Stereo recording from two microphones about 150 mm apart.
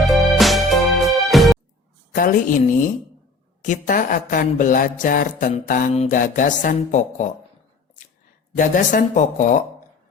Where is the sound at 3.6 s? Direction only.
65° left (ahead or behind).